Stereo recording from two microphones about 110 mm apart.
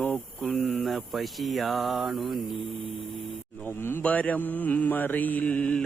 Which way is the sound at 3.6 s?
20° left (ahead or behind).